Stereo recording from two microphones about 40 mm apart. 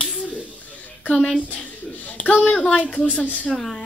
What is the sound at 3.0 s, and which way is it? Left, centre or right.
Speech, left.